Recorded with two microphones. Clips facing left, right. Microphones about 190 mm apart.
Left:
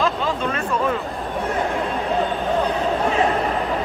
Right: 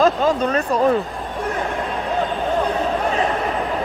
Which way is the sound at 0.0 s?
45° right (ahead or behind).